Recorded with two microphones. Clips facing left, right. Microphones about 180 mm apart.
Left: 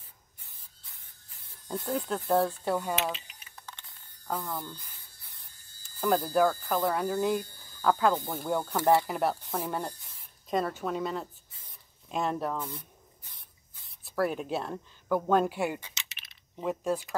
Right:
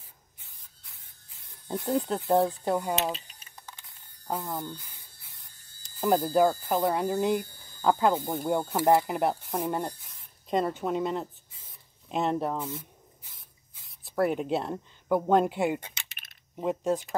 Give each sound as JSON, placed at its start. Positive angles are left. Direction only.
{"t": 1.9, "sound": "speech", "side_deg": -25}
{"t": 3.0, "sound": "speech", "side_deg": -35}
{"t": 4.4, "sound": "speech", "side_deg": -20}
{"t": 5.9, "sound": "speech", "side_deg": -20}
{"t": 12.5, "sound": "spray", "side_deg": -5}
{"t": 14.0, "sound": "speech", "side_deg": -20}
{"t": 15.8, "sound": "typing", "side_deg": -55}
{"t": 16.5, "sound": "speech", "side_deg": -20}